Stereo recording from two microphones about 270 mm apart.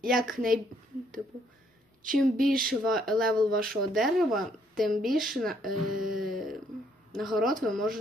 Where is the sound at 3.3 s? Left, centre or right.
Right.